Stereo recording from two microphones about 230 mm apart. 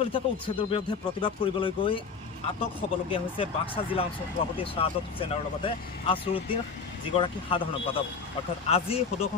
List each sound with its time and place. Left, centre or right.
0.0 s speech: left